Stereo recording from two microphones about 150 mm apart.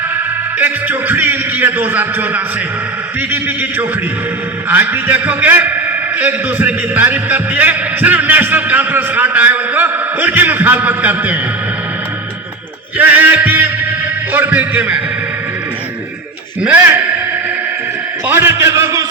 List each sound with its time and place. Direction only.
0.6 s a man's voice: 10° right (ahead or behind)
4.7 s a man's voice: 10° right (ahead or behind)
13.0 s a man's voice: 10° right (ahead or behind)
16.6 s a man's voice: 10° right (ahead or behind)
18.3 s a man's voice: 15° right (ahead or behind)